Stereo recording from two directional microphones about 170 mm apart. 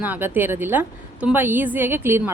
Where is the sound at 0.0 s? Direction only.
10° right (ahead or behind).